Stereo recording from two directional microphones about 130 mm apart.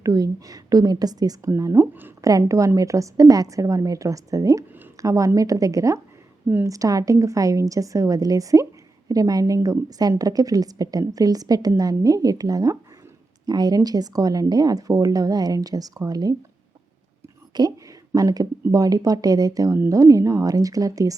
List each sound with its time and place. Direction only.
0.0 s speech: 25° right (ahead or behind)
17.5 s speech: 30° right (ahead or behind)